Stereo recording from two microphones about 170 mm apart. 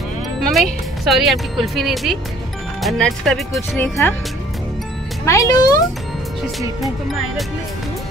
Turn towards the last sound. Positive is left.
turn(degrees=0)  # may be behind; listen again after turning